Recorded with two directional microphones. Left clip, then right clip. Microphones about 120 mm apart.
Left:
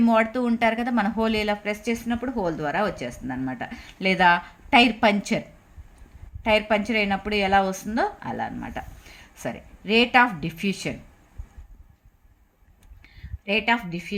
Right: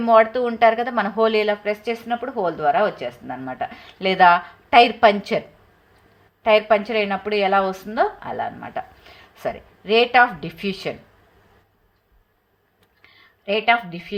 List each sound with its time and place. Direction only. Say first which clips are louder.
0.0 s a woman's voice: right 6 dB; 35° left (ahead or behind)
6.4 s a woman's voice: right 5 dB; 35° left (ahead or behind)
13.0 s a sound: right 1 dB; 35° left (ahead or behind)